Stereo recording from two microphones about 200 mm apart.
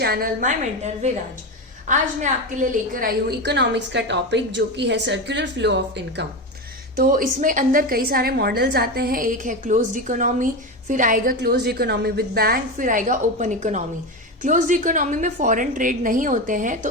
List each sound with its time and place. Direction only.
0.0 s a woman's voice: 50° right (ahead or behind)
1.9 s a woman's voice: 40° right (ahead or behind); by 6.2 s 60° right (ahead or behind)
6.9 s a woman's voice: 45° right (ahead or behind)